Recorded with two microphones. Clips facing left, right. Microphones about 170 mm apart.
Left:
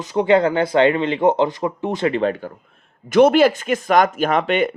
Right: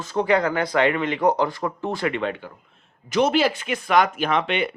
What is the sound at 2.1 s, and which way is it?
Speech, 40° left (ahead or behind).